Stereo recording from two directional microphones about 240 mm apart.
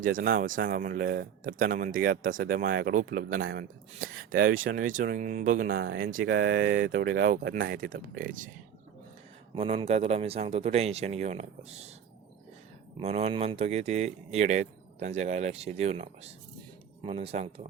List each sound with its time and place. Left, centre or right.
0.0 s speech: right
9.6 s speech: right
13.0 s speech: right